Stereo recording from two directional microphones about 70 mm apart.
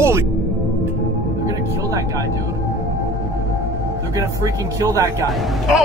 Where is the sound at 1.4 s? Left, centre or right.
Right.